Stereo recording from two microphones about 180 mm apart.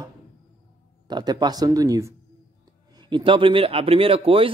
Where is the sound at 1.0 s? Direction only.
20° right (ahead or behind).